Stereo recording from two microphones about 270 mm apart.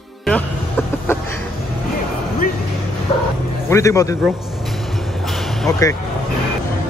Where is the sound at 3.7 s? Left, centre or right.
Centre.